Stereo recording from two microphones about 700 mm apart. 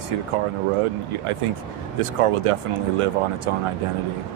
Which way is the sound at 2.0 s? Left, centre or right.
Right.